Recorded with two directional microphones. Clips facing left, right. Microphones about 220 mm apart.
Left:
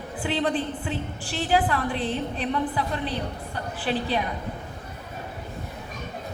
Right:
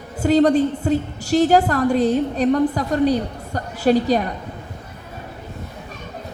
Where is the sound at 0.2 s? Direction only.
40° right (ahead or behind).